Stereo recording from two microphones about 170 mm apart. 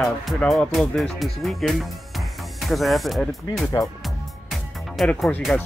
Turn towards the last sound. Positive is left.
turn(degrees=5)  # may be behind; listen again after turning